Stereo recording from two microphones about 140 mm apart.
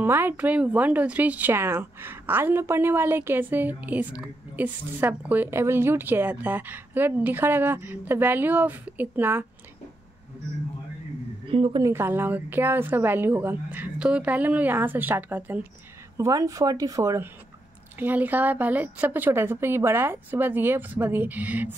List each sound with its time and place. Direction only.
0.0 s a woman's voice: 15° right (ahead or behind)
11.5 s a woman's voice: 40° right (ahead or behind)
11.8 s a woman's voice: 15° right (ahead or behind)
16.2 s a woman's voice: 25° right (ahead or behind)